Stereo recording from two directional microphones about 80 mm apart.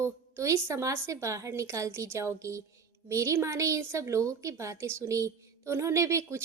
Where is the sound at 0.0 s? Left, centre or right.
Right.